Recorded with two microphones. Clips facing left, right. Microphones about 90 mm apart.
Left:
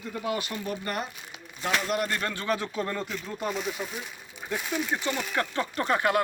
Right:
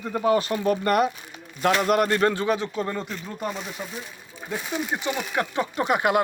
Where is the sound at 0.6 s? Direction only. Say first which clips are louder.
Right 11 dB; 55° right (ahead or behind).